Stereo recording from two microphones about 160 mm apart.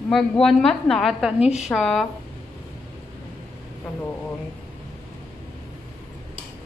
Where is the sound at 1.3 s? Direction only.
40° left (ahead or behind).